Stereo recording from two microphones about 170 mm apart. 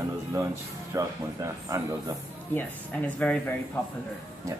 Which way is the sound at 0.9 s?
15° right (ahead or behind).